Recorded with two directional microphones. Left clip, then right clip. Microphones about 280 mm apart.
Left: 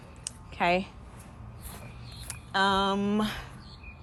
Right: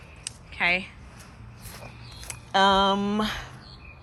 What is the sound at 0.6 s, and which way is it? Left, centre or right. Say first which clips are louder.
Speech: right 2 dB; centre.